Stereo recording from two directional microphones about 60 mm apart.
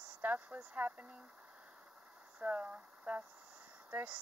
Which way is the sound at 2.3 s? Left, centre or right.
Centre.